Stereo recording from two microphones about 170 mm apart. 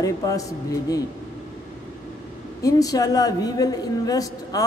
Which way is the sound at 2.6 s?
20° left (ahead or behind).